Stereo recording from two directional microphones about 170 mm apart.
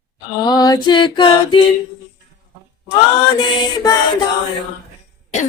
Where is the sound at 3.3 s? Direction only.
25° left (ahead or behind).